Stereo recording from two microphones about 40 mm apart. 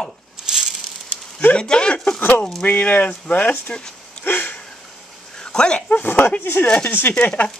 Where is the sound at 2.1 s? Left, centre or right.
Left.